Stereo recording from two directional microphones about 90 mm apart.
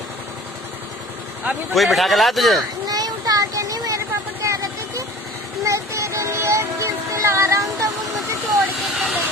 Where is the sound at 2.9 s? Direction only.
45° right (ahead or behind).